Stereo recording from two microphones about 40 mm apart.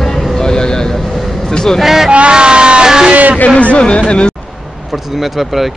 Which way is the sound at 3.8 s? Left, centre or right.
Left.